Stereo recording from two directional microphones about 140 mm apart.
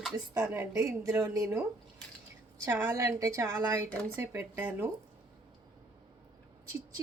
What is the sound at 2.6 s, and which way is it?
Speech, 15° right (ahead or behind).